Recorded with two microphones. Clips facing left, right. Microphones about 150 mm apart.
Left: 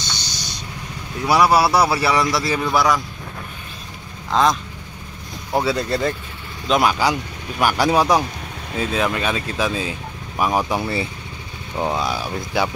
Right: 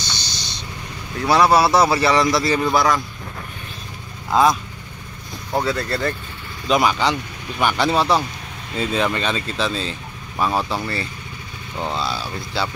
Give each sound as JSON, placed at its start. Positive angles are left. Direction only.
{"t": 0.0, "sound": "vehicle", "side_deg": 15}
{"t": 1.2, "sound": "speech", "side_deg": 10}
{"t": 4.3, "sound": "speech", "side_deg": -5}
{"t": 5.5, "sound": "speech", "side_deg": 10}
{"t": 6.7, "sound": "speech", "side_deg": 0}
{"t": 8.7, "sound": "speech", "side_deg": 5}